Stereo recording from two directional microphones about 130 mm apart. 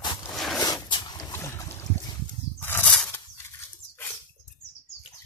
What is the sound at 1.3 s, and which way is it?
Boat, 20° left (ahead or behind).